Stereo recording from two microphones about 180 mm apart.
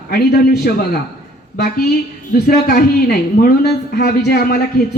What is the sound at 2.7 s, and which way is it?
Speech, 60° left (ahead or behind).